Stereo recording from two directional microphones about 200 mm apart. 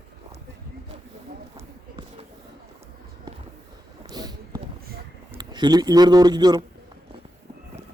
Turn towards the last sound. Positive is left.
turn(degrees=-20)  # may be behind; listen again after turning